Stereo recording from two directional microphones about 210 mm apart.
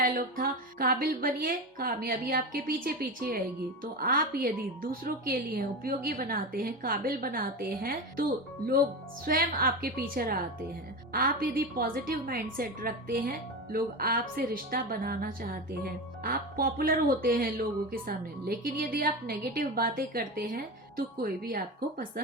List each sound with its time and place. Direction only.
0.0 s a woman's voice: 40° right (ahead or behind)
9.2 s a woman's voice: 45° right (ahead or behind)